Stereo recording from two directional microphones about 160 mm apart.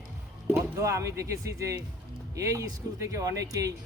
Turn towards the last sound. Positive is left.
turn(degrees=-20)  # may be behind; listen again after turning